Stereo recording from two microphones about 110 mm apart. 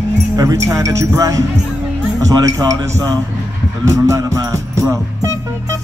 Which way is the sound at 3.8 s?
30° right (ahead or behind).